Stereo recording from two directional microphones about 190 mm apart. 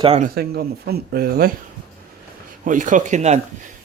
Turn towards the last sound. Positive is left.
turn(degrees=-35)  # may be behind; listen again after turning